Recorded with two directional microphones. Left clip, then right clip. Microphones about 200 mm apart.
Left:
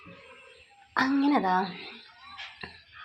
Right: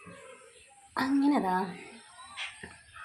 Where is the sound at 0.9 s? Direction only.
10° left (ahead or behind).